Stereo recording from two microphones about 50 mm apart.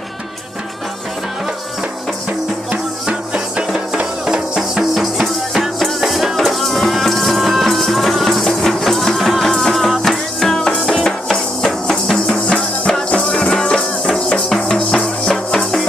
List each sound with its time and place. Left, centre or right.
2.7 s music: centre